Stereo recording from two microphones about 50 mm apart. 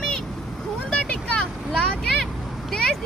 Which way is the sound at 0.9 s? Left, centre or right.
Left.